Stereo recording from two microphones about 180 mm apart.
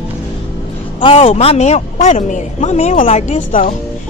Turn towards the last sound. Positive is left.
turn(degrees=45)  # may be behind; listen again after turning